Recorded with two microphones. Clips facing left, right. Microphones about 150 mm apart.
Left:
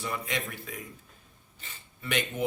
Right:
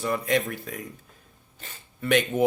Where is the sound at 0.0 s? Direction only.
45° right (ahead or behind).